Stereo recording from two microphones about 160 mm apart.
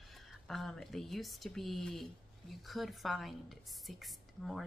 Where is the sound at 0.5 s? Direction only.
Centre (ahead or behind).